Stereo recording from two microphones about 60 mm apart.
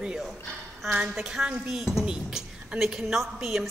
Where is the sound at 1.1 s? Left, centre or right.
Centre.